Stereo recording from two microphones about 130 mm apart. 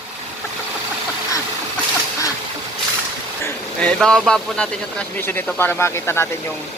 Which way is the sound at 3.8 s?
5° left (ahead or behind).